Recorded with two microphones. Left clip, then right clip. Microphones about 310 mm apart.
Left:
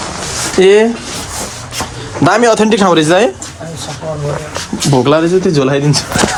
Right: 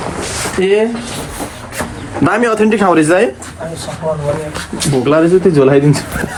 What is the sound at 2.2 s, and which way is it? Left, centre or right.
Speech, centre.